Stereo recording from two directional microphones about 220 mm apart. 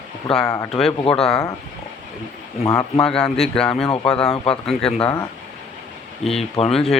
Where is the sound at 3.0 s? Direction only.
5° left (ahead or behind).